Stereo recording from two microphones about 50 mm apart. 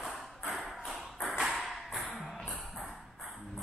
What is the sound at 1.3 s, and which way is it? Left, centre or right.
Tap, centre.